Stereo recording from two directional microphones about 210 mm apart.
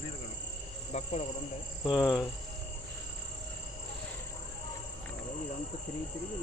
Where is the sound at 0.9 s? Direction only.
30° left (ahead or behind).